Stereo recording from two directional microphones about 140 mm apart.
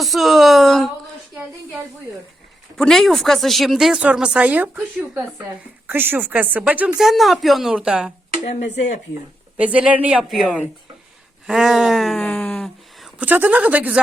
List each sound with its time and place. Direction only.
0.0 s a sound: centre (ahead or behind)
2.7 s speech: 5° left (ahead or behind)
8.4 s speech: 55° left (ahead or behind)
9.6 s speech: 10° right (ahead or behind)
12.2 s a sound: 5° left (ahead or behind)
13.2 s speech: 15° right (ahead or behind)